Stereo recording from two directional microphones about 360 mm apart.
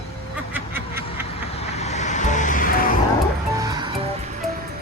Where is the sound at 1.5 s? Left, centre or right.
Centre.